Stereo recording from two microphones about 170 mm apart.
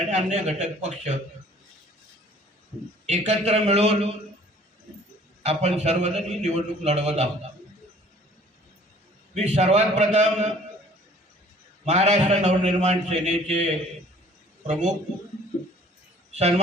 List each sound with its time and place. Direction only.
0.1 s a man's voice: 45° right (ahead or behind)
3.1 s a man's voice: 40° right (ahead or behind)
5.4 s a man's voice: 40° right (ahead or behind)
9.3 s a man's voice: 40° right (ahead or behind)
11.9 s a man's voice: 45° right (ahead or behind)
14.7 s a man's voice: 45° right (ahead or behind)
16.3 s a man's voice: 40° right (ahead or behind)